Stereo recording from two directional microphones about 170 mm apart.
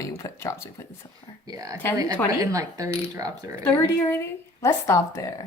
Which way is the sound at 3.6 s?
15° left (ahead or behind).